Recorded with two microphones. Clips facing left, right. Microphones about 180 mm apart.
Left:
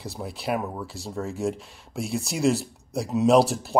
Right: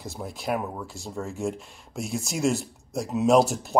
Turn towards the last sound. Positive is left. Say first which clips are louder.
# left 1 dB
turn(degrees=0)  # may be behind; listen again after turning